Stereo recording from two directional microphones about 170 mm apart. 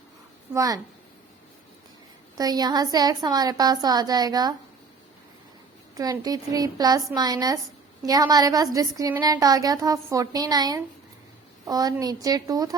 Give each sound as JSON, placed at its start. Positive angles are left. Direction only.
{"t": 0.5, "sound": "a woman's voice", "side_deg": -20}
{"t": 2.4, "sound": "a woman's voice", "side_deg": -25}
{"t": 6.0, "sound": "a woman's voice", "side_deg": -20}